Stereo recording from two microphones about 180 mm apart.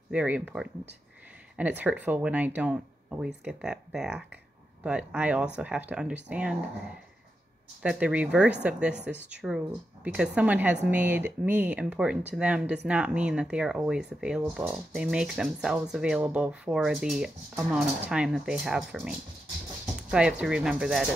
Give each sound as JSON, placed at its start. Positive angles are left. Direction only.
{"t": 0.1, "sound": "a woman's voice", "side_deg": -5}
{"t": 7.8, "sound": "a woman's voice", "side_deg": -5}